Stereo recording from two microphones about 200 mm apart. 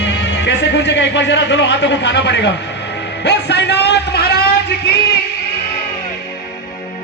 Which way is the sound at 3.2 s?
55° left (ahead or behind).